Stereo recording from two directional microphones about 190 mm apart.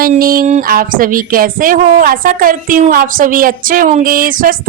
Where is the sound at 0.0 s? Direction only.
50° right (ahead or behind).